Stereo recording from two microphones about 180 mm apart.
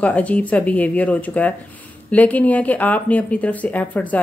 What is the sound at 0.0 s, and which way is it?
Speech, 10° left (ahead or behind).